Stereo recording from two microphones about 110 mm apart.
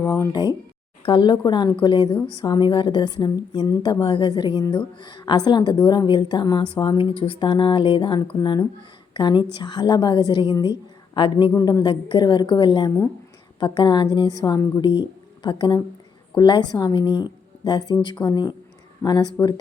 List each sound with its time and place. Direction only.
0.0 s speech: 20° left (ahead or behind)
1.0 s a woman's voice: 45° left (ahead or behind)
11.5 s speech: 30° left (ahead or behind)
11.8 s a woman's voice: 45° left (ahead or behind)